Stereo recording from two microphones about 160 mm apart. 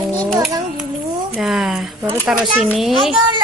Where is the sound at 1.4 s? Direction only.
Centre (ahead or behind).